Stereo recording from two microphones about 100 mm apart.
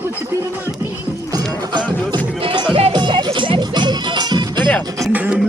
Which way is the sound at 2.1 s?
55° right (ahead or behind).